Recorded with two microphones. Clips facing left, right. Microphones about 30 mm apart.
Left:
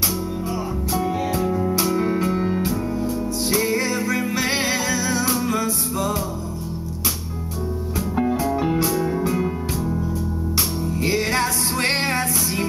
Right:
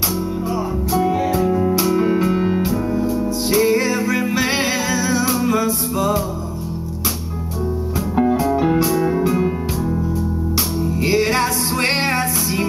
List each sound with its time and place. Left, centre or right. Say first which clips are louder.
0.9 s music: right 5 dB; centre
8.2 s music: right 5 dB; centre
9.0 s music: right 4 dB; centre
11.0 s music: right 4 dB; right